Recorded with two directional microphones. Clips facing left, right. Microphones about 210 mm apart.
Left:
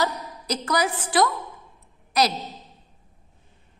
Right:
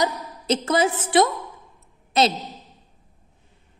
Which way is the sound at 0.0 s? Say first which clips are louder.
Right 2 dB; 20° right (ahead or behind).